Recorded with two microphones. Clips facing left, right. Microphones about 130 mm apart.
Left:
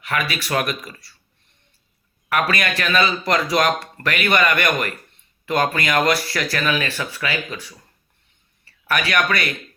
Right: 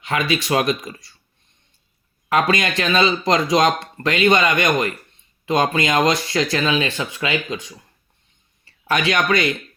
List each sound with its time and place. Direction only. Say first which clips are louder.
0.0 s speech: right 3 dB; 25° right (ahead or behind)
2.3 s speech: right 3 dB; 25° right (ahead or behind)